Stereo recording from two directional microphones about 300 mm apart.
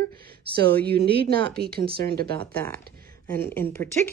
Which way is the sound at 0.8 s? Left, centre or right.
Right.